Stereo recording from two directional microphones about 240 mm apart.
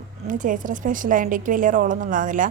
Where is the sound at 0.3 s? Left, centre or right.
Right.